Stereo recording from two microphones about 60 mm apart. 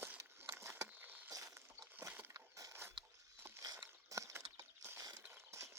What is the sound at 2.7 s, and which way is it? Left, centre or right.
Biting, right.